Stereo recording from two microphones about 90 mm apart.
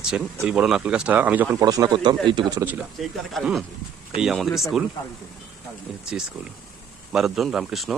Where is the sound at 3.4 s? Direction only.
5° left (ahead or behind).